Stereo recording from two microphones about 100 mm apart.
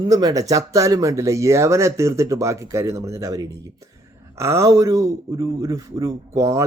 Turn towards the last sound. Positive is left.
turn(degrees=-30)  # may be behind; listen again after turning